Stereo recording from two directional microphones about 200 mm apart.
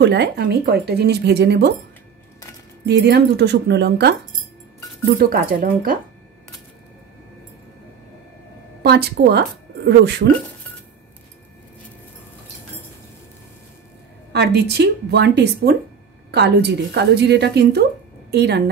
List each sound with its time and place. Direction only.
0.0 s speech: 55° right (ahead or behind)
2.8 s speech: 55° right (ahead or behind)
5.1 s speech: 45° right (ahead or behind)
8.8 s speech: 55° right (ahead or behind)
14.3 s a woman's voice: 55° right (ahead or behind)